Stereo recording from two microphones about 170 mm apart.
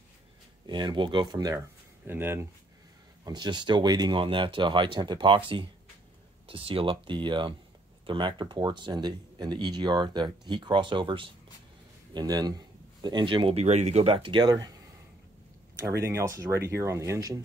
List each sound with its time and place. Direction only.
0.7 s speech: 25° right (ahead or behind)
2.0 s speech: 15° right (ahead or behind)
3.3 s speech: 25° right (ahead or behind)
16.0 s speech: 15° right (ahead or behind)